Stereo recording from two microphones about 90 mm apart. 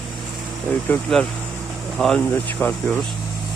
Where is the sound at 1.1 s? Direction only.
5° left (ahead or behind).